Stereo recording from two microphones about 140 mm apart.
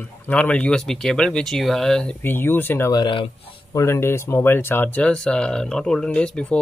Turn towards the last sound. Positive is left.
turn(degrees=5)  # may be behind; listen again after turning